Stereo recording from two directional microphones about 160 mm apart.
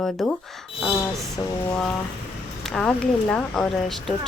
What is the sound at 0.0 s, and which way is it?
Speech, 5° left (ahead or behind).